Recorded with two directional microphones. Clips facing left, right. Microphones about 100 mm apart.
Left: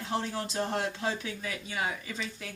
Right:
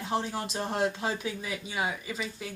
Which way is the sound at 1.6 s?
10° right (ahead or behind).